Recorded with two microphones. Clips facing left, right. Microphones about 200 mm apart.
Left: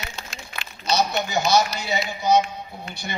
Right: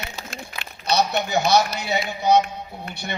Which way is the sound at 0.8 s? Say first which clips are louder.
Right 1 dB; 60° right (ahead or behind).